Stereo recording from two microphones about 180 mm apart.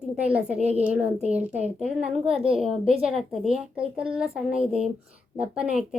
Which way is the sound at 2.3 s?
30° right (ahead or behind).